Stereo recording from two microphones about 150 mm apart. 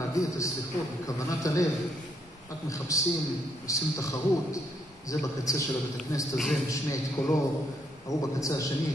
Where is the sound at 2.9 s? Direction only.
20° left (ahead or behind).